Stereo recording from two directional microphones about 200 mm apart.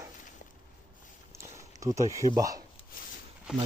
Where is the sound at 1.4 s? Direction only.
15° right (ahead or behind).